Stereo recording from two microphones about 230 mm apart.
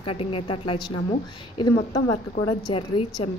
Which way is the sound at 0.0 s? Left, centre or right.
Left.